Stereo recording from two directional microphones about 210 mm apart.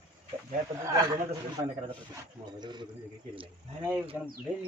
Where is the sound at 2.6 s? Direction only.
20° right (ahead or behind).